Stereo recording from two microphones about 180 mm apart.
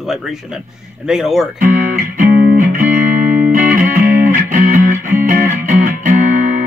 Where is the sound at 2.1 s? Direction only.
50° right (ahead or behind).